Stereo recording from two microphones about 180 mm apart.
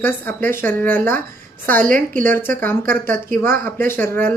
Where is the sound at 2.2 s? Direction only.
10° left (ahead or behind).